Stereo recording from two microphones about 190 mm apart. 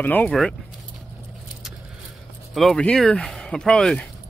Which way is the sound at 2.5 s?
Centre (ahead or behind).